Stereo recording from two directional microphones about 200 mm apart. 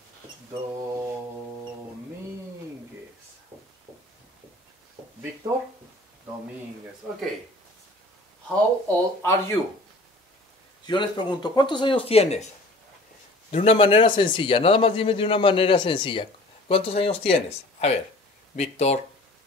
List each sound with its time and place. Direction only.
0.5 s mantra: 15° right (ahead or behind)
8.8 s speech: 10° left (ahead or behind)
10.9 s a man's voice: 20° left (ahead or behind)
13.5 s a man's voice: 30° left (ahead or behind)